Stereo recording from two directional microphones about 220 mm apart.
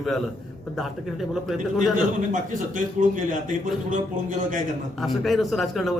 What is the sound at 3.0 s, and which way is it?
A man's voice, 35° right (ahead or behind).